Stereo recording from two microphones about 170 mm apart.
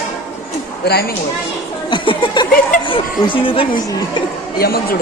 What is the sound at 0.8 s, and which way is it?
Speech, 70° left (ahead or behind).